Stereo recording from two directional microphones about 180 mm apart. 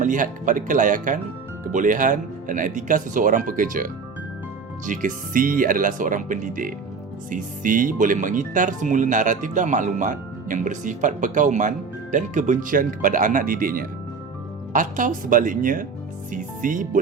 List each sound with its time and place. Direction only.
0.0 s speech: 45° right (ahead or behind)